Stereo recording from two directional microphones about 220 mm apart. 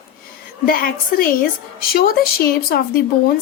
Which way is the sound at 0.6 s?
40° left (ahead or behind).